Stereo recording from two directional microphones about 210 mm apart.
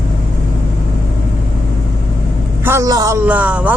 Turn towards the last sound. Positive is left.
turn(degrees=-5)  # may be behind; listen again after turning